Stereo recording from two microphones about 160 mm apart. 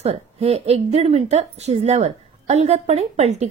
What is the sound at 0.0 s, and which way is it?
A woman's voice, 40° right (ahead or behind).